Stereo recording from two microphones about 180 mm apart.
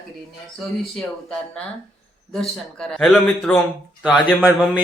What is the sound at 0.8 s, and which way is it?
Speech, 5° left (ahead or behind).